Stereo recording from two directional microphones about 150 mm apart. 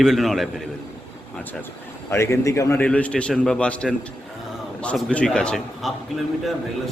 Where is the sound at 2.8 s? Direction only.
5° left (ahead or behind).